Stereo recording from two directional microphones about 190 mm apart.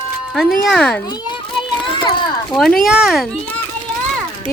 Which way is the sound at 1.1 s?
25° left (ahead or behind).